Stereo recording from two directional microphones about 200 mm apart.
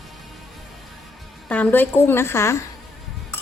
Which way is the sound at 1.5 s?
10° left (ahead or behind).